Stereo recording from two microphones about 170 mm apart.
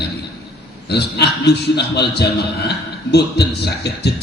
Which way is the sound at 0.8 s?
75° left (ahead or behind).